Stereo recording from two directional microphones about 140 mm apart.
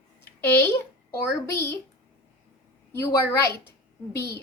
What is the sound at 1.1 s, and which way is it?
Speech, 20° left (ahead or behind).